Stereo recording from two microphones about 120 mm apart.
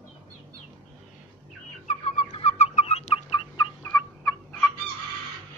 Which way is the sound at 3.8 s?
25° left (ahead or behind).